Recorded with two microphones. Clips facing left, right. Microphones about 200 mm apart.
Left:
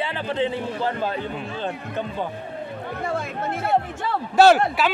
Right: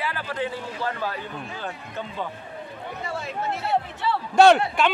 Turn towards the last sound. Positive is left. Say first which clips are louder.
# left 1 dB
turn(degrees=5)  # may be behind; listen again after turning